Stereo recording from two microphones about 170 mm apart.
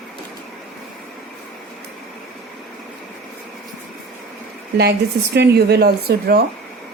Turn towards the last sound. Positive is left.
turn(degrees=-70)  # may be behind; listen again after turning